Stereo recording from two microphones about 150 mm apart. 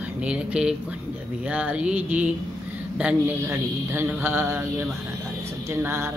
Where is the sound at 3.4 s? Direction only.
15° right (ahead or behind).